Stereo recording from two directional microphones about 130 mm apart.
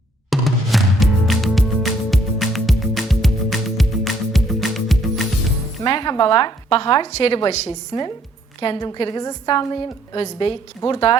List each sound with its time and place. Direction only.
0.3 s music: centre (ahead or behind)
5.8 s a woman's voice: 35° left (ahead or behind)
7.1 s a woman's voice: 50° left (ahead or behind)
7.9 s a woman's voice: 40° left (ahead or behind)